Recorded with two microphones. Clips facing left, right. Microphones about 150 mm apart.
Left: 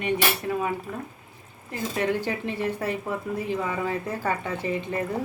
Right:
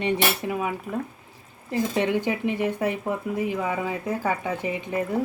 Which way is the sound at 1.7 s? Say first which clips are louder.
Right 3 dB; 20° right (ahead or behind).